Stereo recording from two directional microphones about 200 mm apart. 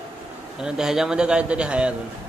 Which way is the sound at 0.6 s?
5° right (ahead or behind).